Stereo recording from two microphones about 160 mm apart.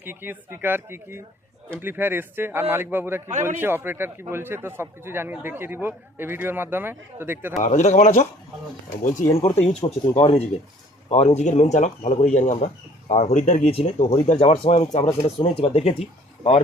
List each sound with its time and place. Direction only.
0.0 s speech: 15° right (ahead or behind)
7.6 s speech: 50° left (ahead or behind)
9.3 s speech: 40° left (ahead or behind)